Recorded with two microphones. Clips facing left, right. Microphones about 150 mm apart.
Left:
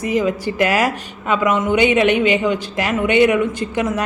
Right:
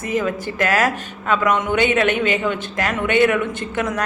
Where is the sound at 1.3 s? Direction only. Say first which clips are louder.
Left 2 dB; 10° left (ahead or behind).